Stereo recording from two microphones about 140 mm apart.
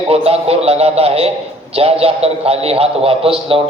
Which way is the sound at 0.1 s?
45° right (ahead or behind).